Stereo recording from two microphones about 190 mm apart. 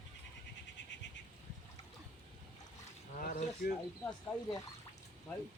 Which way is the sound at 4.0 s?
15° left (ahead or behind).